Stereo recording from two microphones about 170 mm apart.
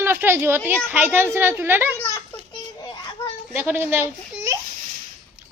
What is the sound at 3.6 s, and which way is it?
Speech, 10° right (ahead or behind).